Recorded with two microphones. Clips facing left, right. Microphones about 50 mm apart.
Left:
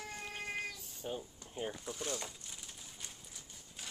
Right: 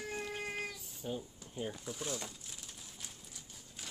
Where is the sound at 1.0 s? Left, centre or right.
Centre.